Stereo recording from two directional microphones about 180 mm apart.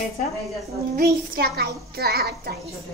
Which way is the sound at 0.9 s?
55° right (ahead or behind).